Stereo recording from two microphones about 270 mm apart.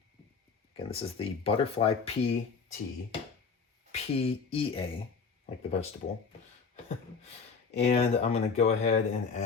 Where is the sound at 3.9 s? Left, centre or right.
Left.